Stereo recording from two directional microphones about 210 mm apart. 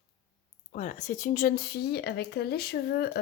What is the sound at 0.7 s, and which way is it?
Speech, 35° left (ahead or behind).